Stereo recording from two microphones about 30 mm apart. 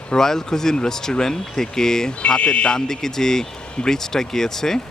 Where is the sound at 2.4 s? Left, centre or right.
Left.